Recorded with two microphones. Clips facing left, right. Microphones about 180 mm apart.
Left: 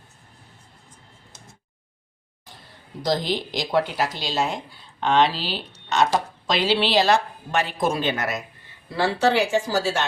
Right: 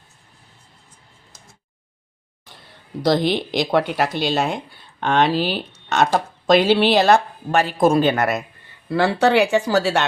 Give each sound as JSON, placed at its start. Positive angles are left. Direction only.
{"t": 3.0, "sound": "speech", "side_deg": -65}